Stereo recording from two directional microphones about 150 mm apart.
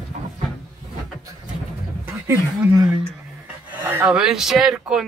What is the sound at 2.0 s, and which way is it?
Speech, 15° right (ahead or behind).